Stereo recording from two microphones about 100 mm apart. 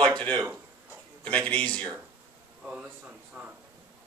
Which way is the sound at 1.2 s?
15° left (ahead or behind).